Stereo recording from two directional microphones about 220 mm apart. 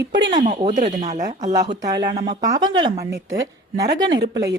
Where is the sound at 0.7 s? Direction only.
35° right (ahead or behind).